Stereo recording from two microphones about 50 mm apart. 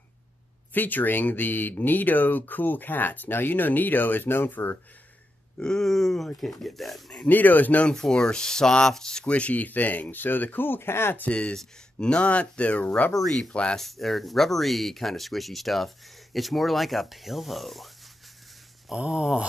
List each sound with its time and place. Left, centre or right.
0.7 s speech: left
5.6 s speech: centre
7.2 s speech: left
7.9 s speech: centre
9.3 s speech: left
11.1 s speech: left
13.2 s speech: centre
13.5 s speech: left
13.7 s speech: centre
18.9 s a sound: centre